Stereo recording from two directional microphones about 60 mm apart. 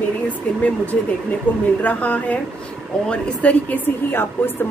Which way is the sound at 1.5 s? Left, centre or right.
Left.